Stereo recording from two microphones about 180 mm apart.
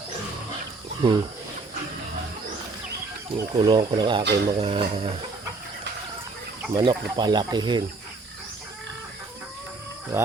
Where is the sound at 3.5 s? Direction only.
25° right (ahead or behind).